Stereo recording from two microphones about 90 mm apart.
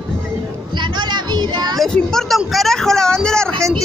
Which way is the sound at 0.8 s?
55° right (ahead or behind).